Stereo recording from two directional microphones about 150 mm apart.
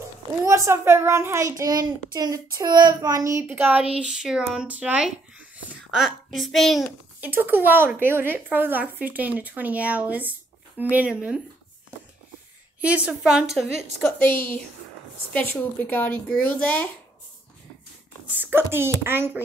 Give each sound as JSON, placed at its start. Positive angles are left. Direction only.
{"t": 0.5, "sound": "a child's voice", "side_deg": -20}
{"t": 7.2, "sound": "speech", "side_deg": -15}
{"t": 12.8, "sound": "a woman's voice", "side_deg": -10}
{"t": 14.0, "sound": "speech", "side_deg": 15}
{"t": 18.2, "sound": "speech", "side_deg": -10}